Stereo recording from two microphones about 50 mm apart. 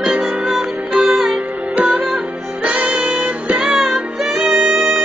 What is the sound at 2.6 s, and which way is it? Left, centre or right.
Music, right.